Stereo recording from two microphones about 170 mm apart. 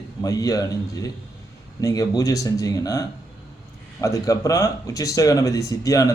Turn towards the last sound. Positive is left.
turn(degrees=20)  # may be behind; listen again after turning